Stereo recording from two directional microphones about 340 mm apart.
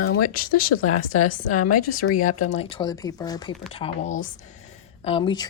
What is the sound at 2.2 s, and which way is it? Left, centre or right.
Speech, left.